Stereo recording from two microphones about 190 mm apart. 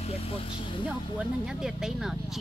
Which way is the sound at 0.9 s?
5° right (ahead or behind).